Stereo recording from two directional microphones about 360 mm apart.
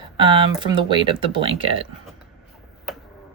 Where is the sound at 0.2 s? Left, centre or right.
Centre.